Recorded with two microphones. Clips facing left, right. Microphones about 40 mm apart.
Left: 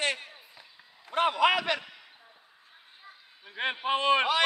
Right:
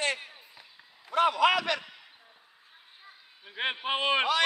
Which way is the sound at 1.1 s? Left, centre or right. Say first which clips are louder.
Right 1 dB; left.